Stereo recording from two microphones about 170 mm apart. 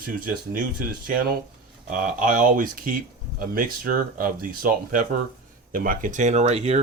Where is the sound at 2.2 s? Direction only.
50° right (ahead or behind).